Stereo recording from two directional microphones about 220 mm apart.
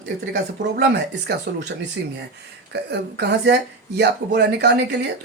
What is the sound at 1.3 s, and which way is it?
Speech, 50° right (ahead or behind).